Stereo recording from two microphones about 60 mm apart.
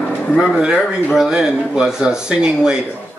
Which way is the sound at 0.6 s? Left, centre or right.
Centre.